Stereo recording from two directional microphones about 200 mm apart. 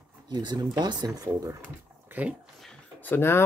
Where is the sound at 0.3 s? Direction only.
20° right (ahead or behind).